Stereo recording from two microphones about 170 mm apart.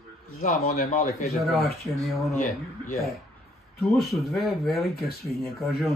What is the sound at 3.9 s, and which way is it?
Speech, centre (ahead or behind).